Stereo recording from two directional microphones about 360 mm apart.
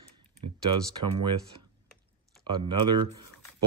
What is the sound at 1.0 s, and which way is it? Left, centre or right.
Speech, right.